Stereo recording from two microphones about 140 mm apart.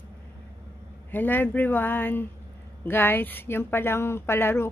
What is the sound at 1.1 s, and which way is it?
A man's voice, 15° left (ahead or behind).